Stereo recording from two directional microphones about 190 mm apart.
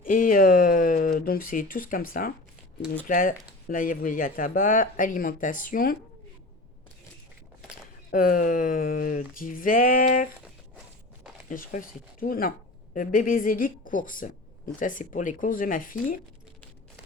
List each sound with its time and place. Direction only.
0.0 s a sound: 45° left (ahead or behind)
3.1 s speech: 50° left (ahead or behind)
8.1 s speech: 45° left (ahead or behind)
11.4 s speech: 45° left (ahead or behind)